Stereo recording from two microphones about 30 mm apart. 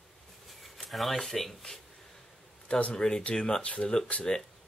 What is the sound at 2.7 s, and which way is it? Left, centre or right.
Speech, left.